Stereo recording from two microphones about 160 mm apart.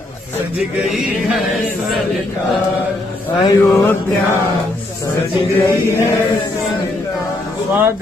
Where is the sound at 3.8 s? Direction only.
15° left (ahead or behind).